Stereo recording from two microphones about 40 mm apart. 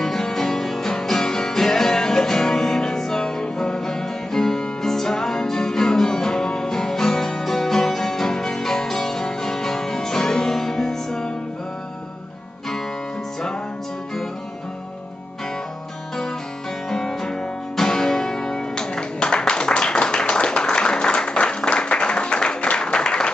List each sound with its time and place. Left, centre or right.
0.0 s music: centre
16.9 s music: centre